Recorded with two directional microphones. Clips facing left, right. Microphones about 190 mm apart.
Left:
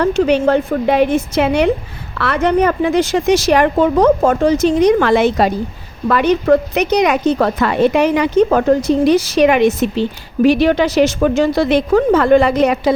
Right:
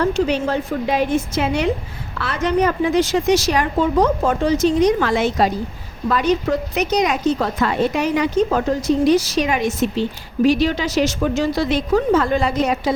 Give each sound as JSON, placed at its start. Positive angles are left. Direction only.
{"t": 0.0, "sound": "a woman's voice", "side_deg": 65}
{"t": 4.2, "sound": "a woman's voice", "side_deg": 45}